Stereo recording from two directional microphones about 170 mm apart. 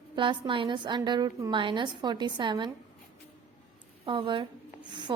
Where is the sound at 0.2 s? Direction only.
30° right (ahead or behind).